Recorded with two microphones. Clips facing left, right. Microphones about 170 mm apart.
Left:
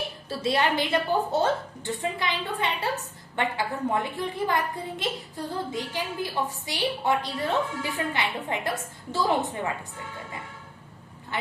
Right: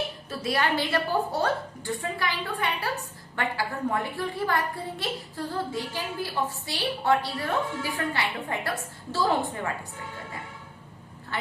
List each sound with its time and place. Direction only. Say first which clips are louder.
0.3 s a child's voice: left 3 dB; 25° left (ahead or behind)